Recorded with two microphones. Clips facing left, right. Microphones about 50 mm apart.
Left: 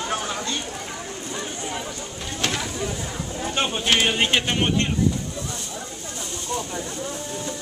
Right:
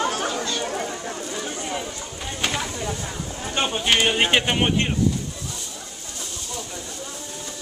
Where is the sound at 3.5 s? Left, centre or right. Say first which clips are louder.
Right 1 dB; centre.